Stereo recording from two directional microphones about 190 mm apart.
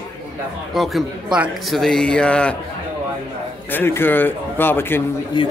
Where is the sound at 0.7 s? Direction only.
Centre (ahead or behind).